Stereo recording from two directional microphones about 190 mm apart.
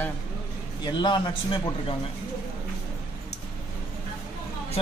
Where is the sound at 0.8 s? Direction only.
25° left (ahead or behind).